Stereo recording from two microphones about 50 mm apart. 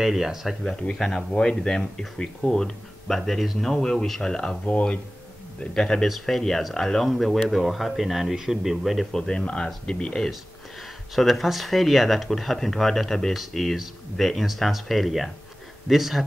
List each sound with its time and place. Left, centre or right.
0.0 s speech: centre
0.7 s speech: centre
4.6 s speech: left
6.0 s speech: centre
9.1 s speech: centre
11.1 s speech: centre